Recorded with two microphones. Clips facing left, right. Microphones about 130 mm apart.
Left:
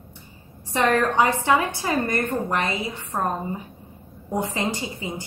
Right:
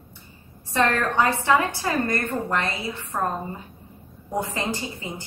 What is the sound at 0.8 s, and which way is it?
A woman's voice, 15° left (ahead or behind).